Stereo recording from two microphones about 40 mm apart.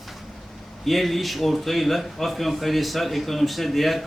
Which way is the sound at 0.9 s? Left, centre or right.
Centre.